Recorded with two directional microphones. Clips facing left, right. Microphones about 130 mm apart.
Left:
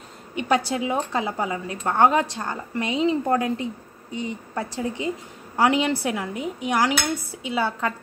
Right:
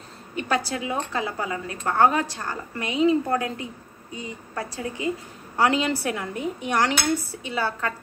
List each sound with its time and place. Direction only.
0.5 s a woman's voice: 20° left (ahead or behind)